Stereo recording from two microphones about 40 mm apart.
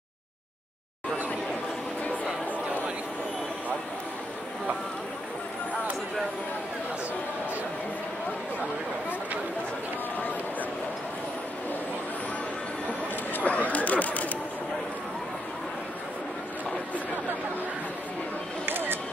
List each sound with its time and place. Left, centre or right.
13.3 s chatter: left
18.7 s music: right